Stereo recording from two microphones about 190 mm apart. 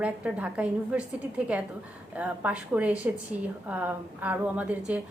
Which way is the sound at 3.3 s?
40° right (ahead or behind).